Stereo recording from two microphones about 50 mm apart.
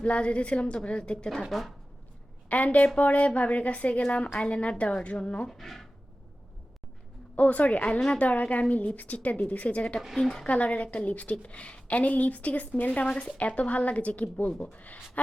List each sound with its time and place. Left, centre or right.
0.0 s a woman's voice: left
1.3 s speech: centre
2.5 s a woman's voice: left
5.5 s speech: centre
7.3 s a woman's voice: left
10.2 s speech: centre
10.4 s a woman's voice: left